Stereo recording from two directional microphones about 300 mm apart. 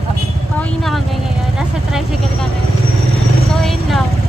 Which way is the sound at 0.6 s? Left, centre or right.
Centre.